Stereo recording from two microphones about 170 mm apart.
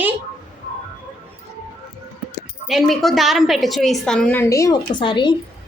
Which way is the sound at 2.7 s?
Centre (ahead or behind).